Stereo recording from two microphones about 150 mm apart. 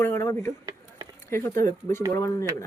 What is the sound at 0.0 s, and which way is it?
Speech, 15° left (ahead or behind).